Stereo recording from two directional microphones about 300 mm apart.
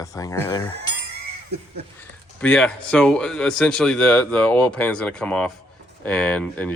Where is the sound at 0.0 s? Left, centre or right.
Centre.